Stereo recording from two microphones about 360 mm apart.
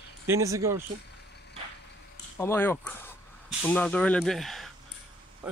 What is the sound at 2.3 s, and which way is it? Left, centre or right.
Speech, centre.